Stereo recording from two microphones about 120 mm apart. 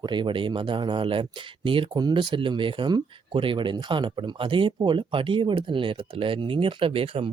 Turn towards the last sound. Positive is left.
turn(degrees=-50)  # may be behind; listen again after turning